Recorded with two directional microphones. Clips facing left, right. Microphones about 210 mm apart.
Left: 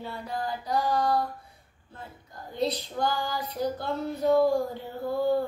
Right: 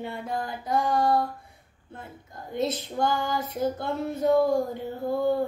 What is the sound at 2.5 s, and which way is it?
Female singing, 20° right (ahead or behind).